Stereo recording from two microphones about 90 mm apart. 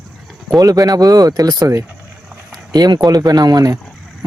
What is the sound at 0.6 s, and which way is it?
Speech, 45° right (ahead or behind).